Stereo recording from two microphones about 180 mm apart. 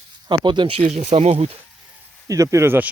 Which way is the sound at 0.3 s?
25° right (ahead or behind).